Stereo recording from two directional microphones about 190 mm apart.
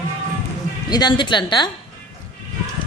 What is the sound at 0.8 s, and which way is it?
Speech, 20° left (ahead or behind).